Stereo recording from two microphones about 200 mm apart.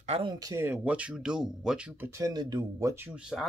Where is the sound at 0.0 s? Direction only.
30° right (ahead or behind).